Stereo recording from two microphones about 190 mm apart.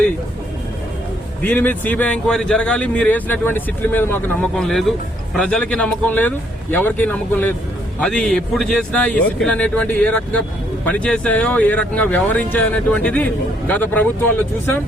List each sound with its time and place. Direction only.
1.5 s a man's voice: 10° left (ahead or behind)